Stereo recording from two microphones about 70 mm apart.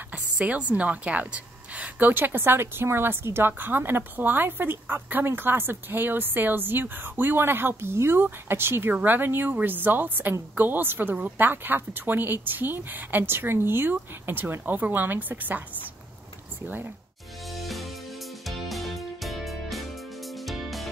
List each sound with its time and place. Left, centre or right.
0.1 s a woman's voice: centre
16.6 s a woman's voice: right
17.5 s music: centre